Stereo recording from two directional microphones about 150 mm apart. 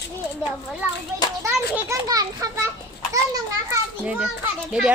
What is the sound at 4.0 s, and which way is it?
Speech, 5° right (ahead or behind).